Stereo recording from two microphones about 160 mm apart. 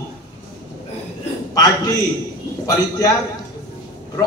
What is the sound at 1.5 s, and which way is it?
Speech, 20° left (ahead or behind).